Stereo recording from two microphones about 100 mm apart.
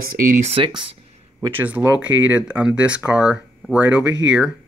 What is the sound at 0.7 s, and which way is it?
Speech, 50° right (ahead or behind).